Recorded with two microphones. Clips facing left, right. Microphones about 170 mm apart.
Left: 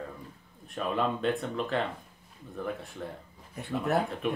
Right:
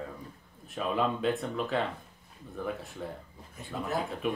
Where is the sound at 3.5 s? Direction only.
65° left (ahead or behind).